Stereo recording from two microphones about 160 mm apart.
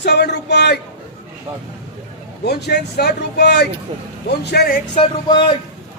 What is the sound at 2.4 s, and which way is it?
A man's voice, 90° left.